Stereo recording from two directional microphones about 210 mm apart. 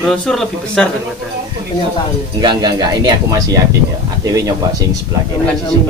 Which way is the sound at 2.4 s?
20° right (ahead or behind).